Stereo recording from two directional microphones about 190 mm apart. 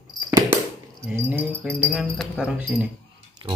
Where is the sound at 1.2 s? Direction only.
10° right (ahead or behind).